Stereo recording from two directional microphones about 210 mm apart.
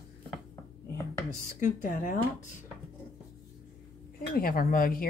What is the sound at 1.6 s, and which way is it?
Speech, 40° left (ahead or behind).